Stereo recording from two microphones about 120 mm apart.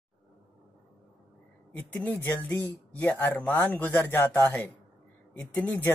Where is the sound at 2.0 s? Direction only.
15° left (ahead or behind).